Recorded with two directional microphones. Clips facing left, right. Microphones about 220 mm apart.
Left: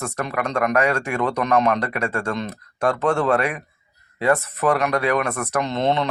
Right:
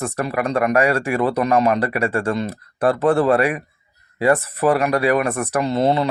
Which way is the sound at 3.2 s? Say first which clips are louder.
Right 4 dB; 10° right (ahead or behind).